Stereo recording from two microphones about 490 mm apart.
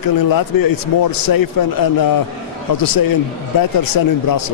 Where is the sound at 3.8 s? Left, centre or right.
Left.